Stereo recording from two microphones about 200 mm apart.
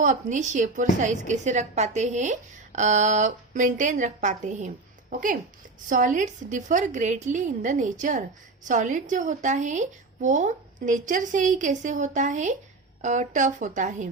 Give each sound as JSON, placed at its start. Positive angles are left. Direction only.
{"t": 0.0, "sound": "a woman's voice", "side_deg": -40}
{"t": 5.9, "sound": "a woman's voice", "side_deg": -40}